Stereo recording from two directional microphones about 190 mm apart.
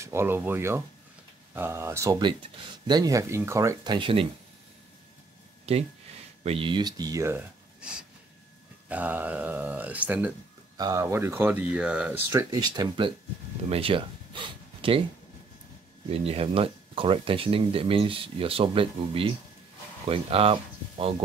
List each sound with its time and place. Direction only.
0.0 s speech: 15° right (ahead or behind)
5.7 s speech: 30° right (ahead or behind); by 12.2 s 5° right (ahead or behind)
12.3 s speech: 20° right (ahead or behind)
16.1 s speech: 30° right (ahead or behind)